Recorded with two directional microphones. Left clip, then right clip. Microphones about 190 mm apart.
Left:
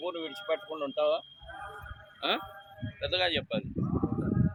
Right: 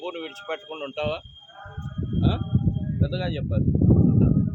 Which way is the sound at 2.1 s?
45° right (ahead or behind).